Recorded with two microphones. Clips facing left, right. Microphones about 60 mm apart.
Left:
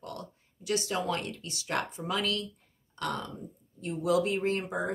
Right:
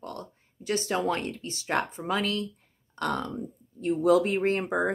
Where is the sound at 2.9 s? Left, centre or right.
Right.